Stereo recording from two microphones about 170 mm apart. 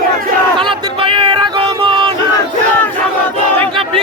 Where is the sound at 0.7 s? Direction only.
30° right (ahead or behind).